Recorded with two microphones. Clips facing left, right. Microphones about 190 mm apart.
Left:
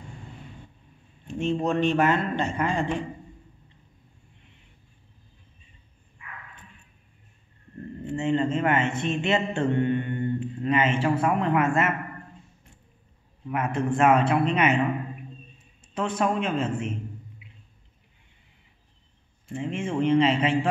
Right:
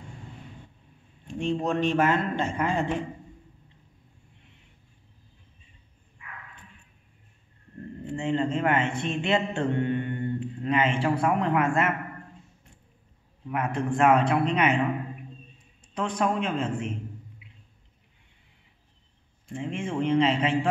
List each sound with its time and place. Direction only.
1.2 s a man's voice: centre (ahead or behind)
8.1 s a man's voice: 5° left (ahead or behind)
13.5 s a man's voice: 5° left (ahead or behind)
15.9 s a man's voice: 5° left (ahead or behind)
19.4 s speech: 5° left (ahead or behind)